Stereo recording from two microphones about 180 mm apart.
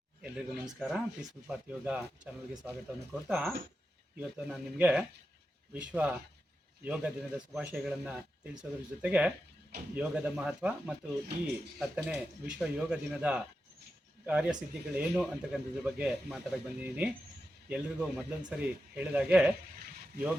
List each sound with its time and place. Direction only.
0.2 s speech: 5° right (ahead or behind)